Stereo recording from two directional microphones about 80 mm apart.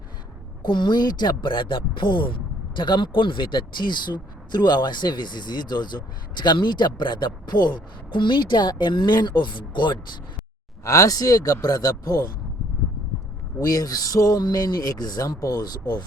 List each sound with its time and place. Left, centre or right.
0.6 s speech: left
10.8 s speech: left
13.6 s speech: left